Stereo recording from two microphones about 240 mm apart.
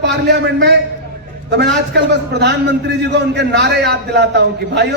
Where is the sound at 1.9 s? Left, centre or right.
Right.